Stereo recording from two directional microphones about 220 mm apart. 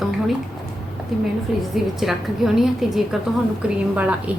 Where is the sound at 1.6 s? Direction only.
Centre (ahead or behind).